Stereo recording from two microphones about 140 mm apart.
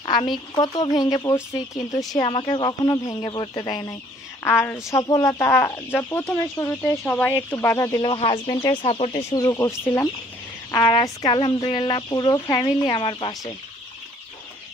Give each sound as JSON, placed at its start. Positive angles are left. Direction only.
{"t": 0.0, "sound": "a sound", "side_deg": 35}
{"t": 0.6, "sound": "speech", "side_deg": 30}
{"t": 8.0, "sound": "speech", "side_deg": 35}
{"t": 9.3, "sound": "speech", "side_deg": 25}